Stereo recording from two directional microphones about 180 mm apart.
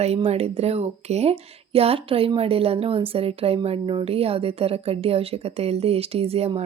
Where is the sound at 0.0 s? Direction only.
35° right (ahead or behind).